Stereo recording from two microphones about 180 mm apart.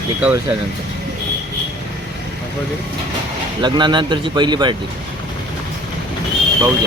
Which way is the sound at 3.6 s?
25° right (ahead or behind).